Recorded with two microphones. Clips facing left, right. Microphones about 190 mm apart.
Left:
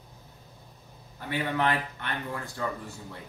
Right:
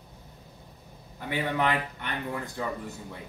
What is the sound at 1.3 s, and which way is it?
Speech, 15° right (ahead or behind).